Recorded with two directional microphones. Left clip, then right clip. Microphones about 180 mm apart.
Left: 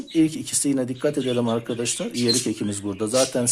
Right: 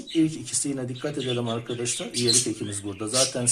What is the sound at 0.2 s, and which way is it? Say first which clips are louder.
Speech: left 3 dB; 40° left (ahead or behind).